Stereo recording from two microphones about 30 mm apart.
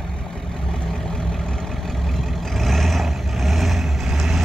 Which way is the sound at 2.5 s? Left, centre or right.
Centre.